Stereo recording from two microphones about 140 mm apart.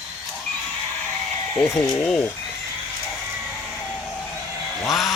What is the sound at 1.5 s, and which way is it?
Speech, 20° left (ahead or behind).